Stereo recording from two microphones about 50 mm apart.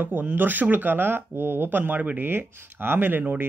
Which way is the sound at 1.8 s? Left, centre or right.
Right.